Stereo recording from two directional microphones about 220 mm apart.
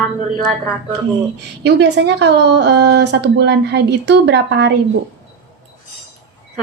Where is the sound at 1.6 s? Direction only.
50° right (ahead or behind).